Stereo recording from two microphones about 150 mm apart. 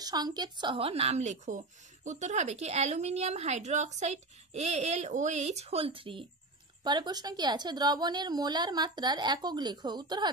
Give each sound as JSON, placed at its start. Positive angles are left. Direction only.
{"t": 0.0, "sound": "a woman's voice", "side_deg": -25}